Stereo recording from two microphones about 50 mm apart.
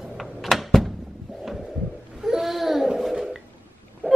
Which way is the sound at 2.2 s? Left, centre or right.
Centre.